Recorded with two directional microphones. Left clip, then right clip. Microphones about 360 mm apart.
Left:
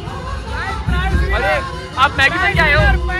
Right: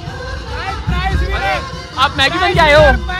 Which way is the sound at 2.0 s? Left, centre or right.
Centre.